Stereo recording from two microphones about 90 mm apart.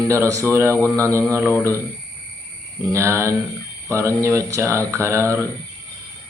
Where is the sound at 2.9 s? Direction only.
30° right (ahead or behind).